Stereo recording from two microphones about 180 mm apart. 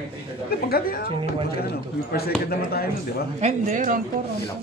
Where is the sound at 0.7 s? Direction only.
55° left (ahead or behind).